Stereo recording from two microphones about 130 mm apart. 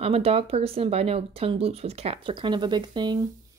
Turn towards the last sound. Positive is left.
turn(degrees=-35)  # may be behind; listen again after turning